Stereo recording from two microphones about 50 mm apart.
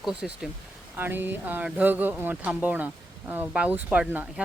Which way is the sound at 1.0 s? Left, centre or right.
Right.